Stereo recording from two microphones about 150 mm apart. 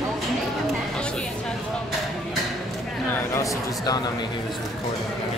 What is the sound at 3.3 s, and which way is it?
Speech, 20° left (ahead or behind).